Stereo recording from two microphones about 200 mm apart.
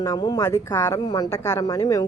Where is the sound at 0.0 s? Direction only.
15° left (ahead or behind).